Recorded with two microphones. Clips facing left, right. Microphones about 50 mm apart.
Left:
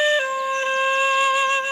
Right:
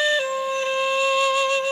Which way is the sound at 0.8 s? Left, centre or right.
Left.